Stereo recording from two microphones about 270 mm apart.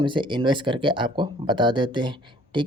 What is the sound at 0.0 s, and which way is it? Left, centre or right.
Speech, centre.